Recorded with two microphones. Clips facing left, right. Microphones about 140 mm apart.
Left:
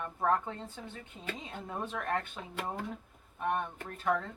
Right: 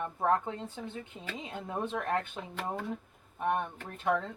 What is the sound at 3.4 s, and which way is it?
Speech, 20° right (ahead or behind).